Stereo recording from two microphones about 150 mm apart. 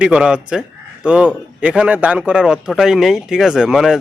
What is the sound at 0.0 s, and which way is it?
Speech, 5° right (ahead or behind).